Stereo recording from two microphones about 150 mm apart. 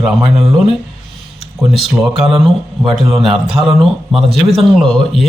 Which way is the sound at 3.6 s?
25° right (ahead or behind).